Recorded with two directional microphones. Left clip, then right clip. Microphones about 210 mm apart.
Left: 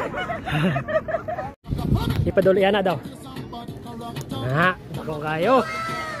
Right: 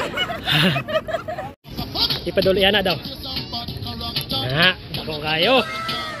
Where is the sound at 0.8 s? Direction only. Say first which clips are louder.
Right 1 dB; 15° right (ahead or behind).